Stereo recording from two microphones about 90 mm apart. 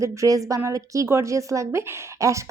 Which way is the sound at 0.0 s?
35° right (ahead or behind).